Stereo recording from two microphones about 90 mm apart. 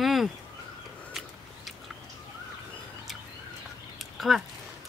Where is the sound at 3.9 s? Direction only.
Centre (ahead or behind).